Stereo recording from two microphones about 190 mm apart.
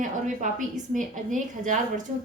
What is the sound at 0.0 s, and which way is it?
A woman's voice, 45° right (ahead or behind).